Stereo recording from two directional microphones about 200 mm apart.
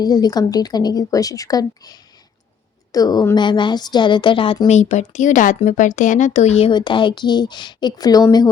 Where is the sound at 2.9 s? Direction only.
20° left (ahead or behind).